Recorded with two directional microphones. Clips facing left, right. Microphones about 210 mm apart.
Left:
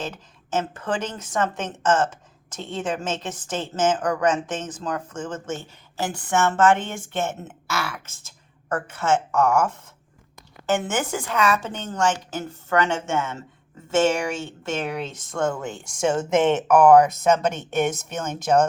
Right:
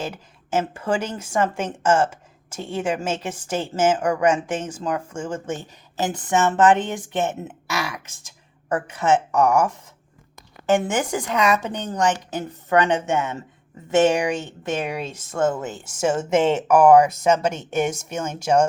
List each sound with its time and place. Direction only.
0.0 s a woman's voice: 10° right (ahead or behind)